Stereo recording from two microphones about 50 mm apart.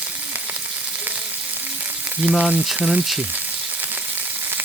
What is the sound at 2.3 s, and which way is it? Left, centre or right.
Frying, centre.